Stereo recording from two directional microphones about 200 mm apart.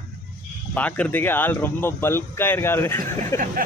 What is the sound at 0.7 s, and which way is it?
Speech, 5° left (ahead or behind).